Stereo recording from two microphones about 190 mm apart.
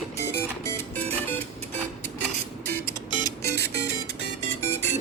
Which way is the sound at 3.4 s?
60° right (ahead or behind).